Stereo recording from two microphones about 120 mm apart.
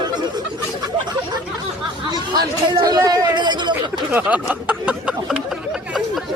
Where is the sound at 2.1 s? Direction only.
35° right (ahead or behind).